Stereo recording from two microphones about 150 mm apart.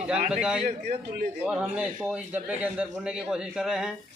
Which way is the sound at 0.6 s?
65° right (ahead or behind).